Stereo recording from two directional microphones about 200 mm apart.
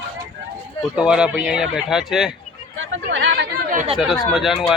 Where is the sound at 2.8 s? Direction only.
65° right (ahead or behind).